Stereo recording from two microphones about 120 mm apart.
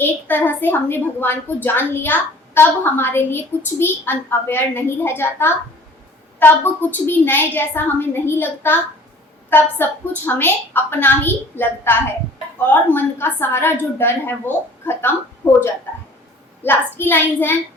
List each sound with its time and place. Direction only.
0.0 s a woman's voice: 15° left (ahead or behind)
16.6 s a woman's voice: 15° left (ahead or behind)